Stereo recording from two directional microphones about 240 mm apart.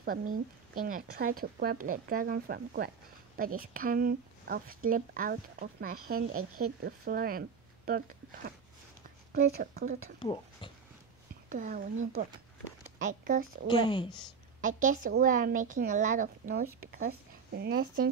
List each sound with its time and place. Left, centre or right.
0.7 s speech: right
6.3 s speech: right
6.8 s speech: right
9.3 s speech: right
10.1 s speech: centre
11.4 s speech: right
13.7 s speech: centre
14.6 s speech: right